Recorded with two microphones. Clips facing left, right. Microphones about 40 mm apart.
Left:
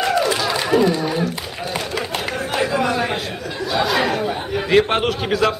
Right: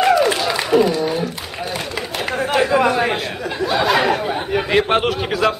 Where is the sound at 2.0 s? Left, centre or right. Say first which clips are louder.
Even; centre.